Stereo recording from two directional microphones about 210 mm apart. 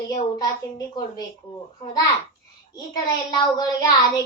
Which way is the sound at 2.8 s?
20° left (ahead or behind).